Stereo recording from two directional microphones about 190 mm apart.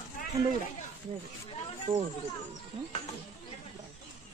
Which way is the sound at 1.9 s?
20° right (ahead or behind).